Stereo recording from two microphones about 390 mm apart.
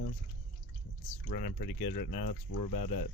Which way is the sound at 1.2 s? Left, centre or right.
Left.